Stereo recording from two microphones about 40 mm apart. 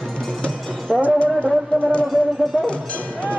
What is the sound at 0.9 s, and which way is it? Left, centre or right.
Speech, centre.